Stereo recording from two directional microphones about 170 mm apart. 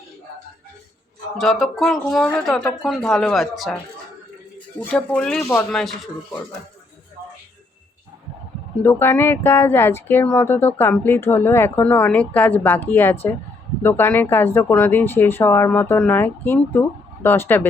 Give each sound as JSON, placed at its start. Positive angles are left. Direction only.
{"t": 1.4, "sound": "speech", "side_deg": 0}
{"t": 4.8, "sound": "speech", "side_deg": 10}
{"t": 5.7, "sound": "speech", "side_deg": 0}
{"t": 8.8, "sound": "speech", "side_deg": 15}